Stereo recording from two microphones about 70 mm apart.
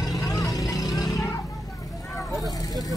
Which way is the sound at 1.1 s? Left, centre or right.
Left.